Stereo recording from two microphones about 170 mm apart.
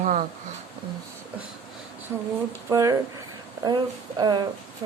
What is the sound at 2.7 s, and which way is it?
Speech, 20° right (ahead or behind).